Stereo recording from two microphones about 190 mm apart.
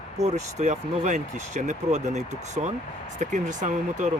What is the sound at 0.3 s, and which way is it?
Speech, 40° right (ahead or behind).